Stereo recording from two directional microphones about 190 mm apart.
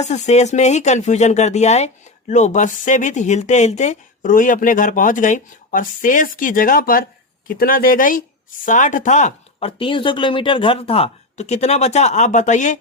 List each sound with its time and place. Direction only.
0.0 s speech: 35° left (ahead or behind)